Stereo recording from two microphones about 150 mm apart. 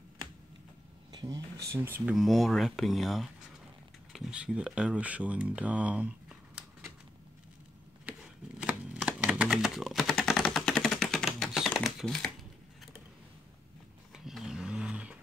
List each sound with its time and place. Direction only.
1.1 s a sound: 25° right (ahead or behind)
1.7 s speech: 15° right (ahead or behind)
2.1 s speech: centre (ahead or behind)
8.2 s shuffling cards: 5° right (ahead or behind)
14.1 s vehicle: centre (ahead or behind)